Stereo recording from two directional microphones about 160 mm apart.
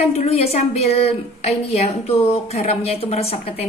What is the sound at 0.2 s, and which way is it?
A woman's voice, 40° left (ahead or behind).